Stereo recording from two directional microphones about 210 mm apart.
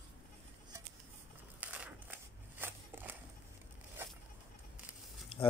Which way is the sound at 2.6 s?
10° right (ahead or behind).